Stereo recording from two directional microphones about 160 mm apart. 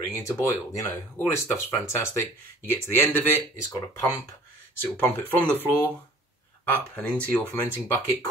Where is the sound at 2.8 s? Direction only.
15° left (ahead or behind).